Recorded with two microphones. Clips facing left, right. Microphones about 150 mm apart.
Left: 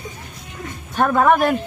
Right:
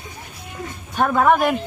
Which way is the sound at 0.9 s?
Centre (ahead or behind).